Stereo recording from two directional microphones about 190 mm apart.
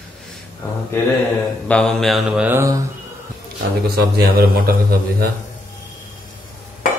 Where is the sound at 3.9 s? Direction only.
55° right (ahead or behind).